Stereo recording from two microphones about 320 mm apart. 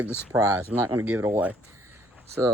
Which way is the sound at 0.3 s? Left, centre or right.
Centre.